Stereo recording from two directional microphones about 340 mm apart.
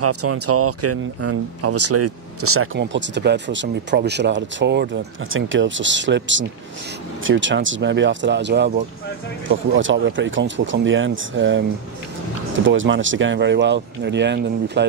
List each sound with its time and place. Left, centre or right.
0.0 s speech: right
12.6 s speech: right